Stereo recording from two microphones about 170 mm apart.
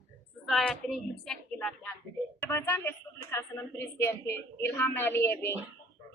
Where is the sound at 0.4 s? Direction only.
Centre (ahead or behind).